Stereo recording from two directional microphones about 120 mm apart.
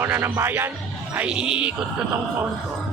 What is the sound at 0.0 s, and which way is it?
Speech, 20° right (ahead or behind).